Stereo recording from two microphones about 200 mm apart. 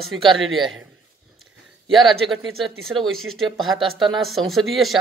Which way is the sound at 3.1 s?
90° right.